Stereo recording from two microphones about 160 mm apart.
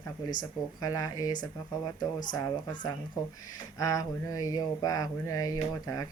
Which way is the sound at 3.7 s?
20° left (ahead or behind).